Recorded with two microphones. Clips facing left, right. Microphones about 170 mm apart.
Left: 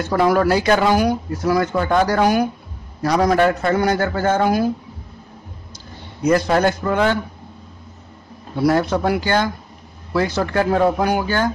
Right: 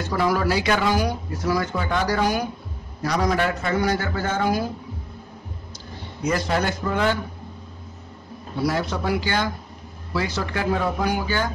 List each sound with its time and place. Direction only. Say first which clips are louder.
0.1 s a man's voice: left 6 dB; 55° left (ahead or behind)
6.2 s a man's voice: left 7 dB; 50° left (ahead or behind)
8.6 s a man's voice: left 7 dB; 55° left (ahead or behind)